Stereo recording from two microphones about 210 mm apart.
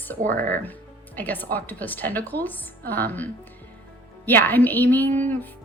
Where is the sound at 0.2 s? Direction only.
40° right (ahead or behind).